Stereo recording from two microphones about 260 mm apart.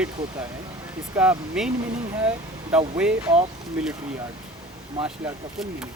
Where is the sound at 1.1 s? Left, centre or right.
Centre.